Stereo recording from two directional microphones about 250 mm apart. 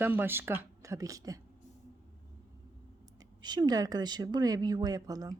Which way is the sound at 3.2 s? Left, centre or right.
Centre.